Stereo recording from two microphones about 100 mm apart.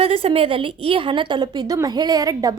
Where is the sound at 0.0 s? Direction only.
75° right (ahead or behind).